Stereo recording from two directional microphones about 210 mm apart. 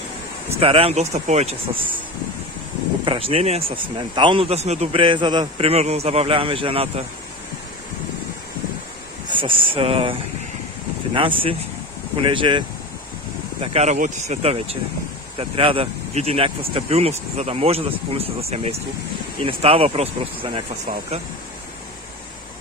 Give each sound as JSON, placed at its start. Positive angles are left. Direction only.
{"t": 0.6, "sound": "speech", "side_deg": -25}
{"t": 3.1, "sound": "speech", "side_deg": -25}
{"t": 9.3, "sound": "speech", "side_deg": -25}
{"t": 11.1, "sound": "speech", "side_deg": -25}